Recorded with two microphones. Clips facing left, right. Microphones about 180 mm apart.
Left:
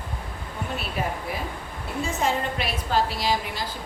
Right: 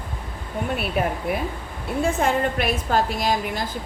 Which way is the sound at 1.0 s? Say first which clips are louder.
Right 5 dB; 55° right (ahead or behind).